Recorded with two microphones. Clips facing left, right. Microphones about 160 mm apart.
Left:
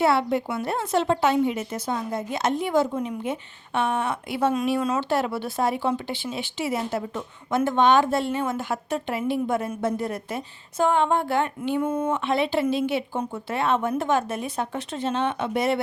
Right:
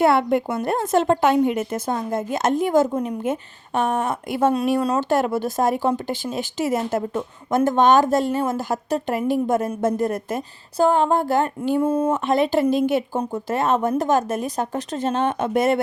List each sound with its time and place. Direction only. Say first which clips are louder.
0.0 s speech: right 4 dB; 50° right (ahead or behind)